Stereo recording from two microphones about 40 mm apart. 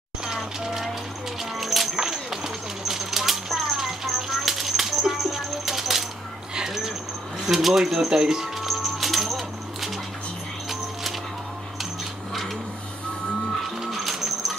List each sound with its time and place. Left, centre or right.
0.2 s music: centre
2.0 s bird: centre
6.5 s a sound: centre
7.4 s speech: centre
8.5 s music: centre
13.7 s music: centre